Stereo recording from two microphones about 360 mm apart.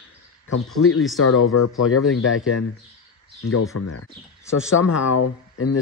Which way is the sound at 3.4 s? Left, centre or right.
Left.